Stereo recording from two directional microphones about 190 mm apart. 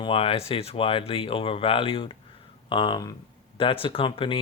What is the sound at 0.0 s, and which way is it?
Speech, 30° left (ahead or behind).